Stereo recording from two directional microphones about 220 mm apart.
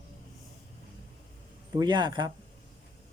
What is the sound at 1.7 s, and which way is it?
Speech, 20° right (ahead or behind).